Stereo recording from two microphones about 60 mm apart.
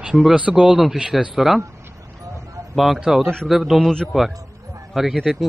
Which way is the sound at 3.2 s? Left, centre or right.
Centre.